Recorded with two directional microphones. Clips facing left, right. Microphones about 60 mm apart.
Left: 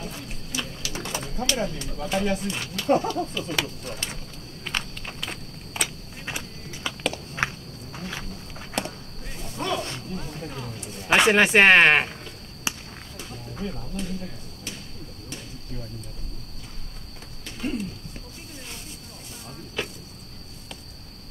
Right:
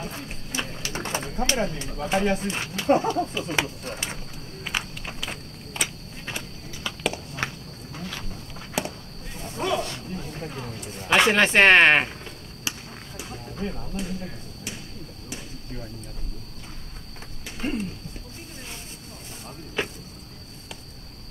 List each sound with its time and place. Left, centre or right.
0.0 s speech: right
4.6 s walk: centre
6.2 s walk: centre
7.3 s cricket: left
8.8 s walk: centre
9.6 s speech: centre
10.5 s a sound: right
11.1 s speech: centre
12.7 s a sound: left
13.2 s a sound: right
17.6 s a sound: right
19.8 s insect: right